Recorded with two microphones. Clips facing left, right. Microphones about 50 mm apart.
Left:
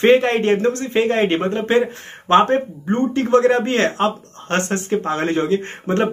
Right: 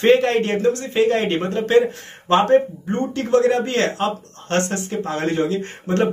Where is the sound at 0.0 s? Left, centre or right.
Centre.